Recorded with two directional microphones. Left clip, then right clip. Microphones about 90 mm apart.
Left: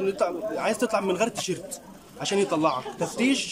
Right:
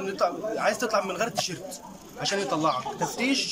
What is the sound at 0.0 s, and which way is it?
A man's voice, 35° left (ahead or behind).